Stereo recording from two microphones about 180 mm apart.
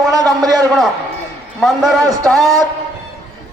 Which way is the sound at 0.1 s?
20° right (ahead or behind).